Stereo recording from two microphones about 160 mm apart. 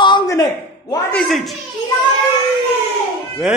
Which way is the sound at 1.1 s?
5° left (ahead or behind).